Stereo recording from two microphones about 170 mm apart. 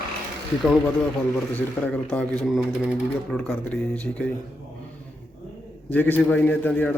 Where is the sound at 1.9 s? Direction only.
5° left (ahead or behind).